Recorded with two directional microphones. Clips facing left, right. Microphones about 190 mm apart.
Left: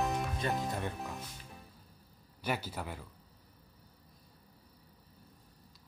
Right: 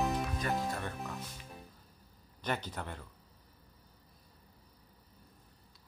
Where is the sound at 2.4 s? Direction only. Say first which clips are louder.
Left 1 dB; 10° left (ahead or behind).